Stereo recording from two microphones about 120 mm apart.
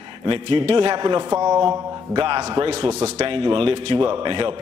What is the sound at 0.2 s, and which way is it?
A man's voice, 45° right (ahead or behind).